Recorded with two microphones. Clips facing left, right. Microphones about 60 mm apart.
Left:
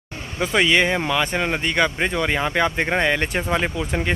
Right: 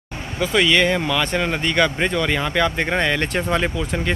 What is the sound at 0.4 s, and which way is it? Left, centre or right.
Speech, left.